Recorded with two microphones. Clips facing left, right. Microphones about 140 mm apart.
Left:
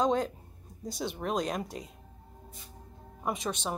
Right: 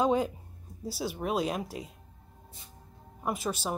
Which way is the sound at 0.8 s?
5° right (ahead or behind).